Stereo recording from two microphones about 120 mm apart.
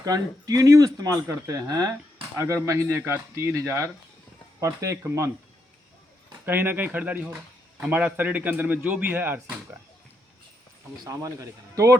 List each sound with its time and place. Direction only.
0.0 s speech: 30° right (ahead or behind)
6.4 s a man's voice: 15° right (ahead or behind)
11.0 s speech: 25° right (ahead or behind)